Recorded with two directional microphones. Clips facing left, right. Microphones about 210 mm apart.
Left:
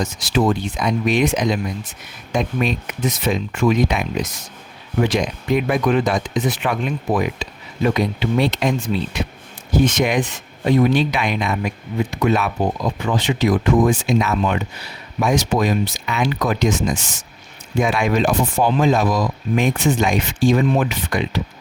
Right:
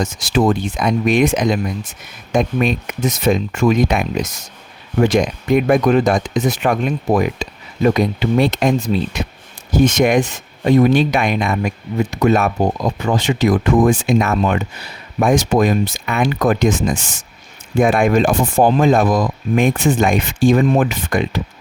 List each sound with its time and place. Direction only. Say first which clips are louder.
0.0 s speech: right 3 dB; 45° right (ahead or behind)